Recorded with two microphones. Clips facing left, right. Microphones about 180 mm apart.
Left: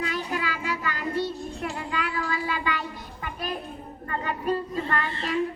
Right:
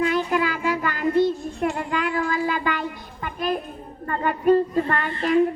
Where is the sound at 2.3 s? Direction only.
45° right (ahead or behind).